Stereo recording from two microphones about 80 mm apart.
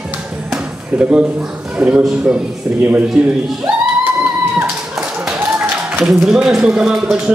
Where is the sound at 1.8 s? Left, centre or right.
Centre.